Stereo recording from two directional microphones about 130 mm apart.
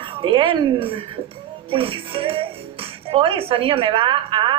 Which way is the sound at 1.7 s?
45° right (ahead or behind).